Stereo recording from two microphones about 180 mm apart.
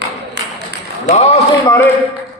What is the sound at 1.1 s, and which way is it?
Speech, 40° left (ahead or behind).